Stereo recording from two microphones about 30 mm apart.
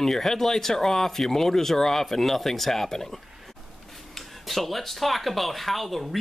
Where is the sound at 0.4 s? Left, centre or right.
Centre.